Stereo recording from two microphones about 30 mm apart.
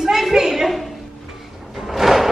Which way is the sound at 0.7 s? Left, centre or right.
Centre.